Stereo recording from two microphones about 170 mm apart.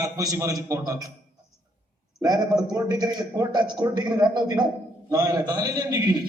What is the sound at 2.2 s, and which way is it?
A man's voice, 20° right (ahead or behind).